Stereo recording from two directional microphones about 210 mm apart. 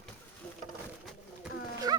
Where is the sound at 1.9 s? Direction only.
20° right (ahead or behind).